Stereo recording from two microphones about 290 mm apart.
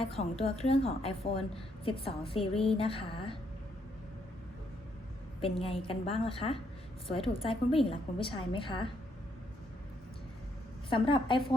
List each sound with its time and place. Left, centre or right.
0.0 s a woman's voice: centre
5.4 s a woman's voice: centre
10.8 s a woman's voice: centre